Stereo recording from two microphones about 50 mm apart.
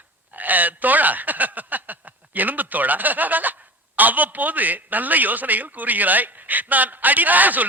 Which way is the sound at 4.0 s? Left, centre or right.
Right.